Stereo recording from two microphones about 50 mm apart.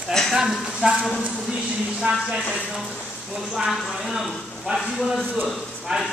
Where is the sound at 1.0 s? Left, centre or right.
Centre.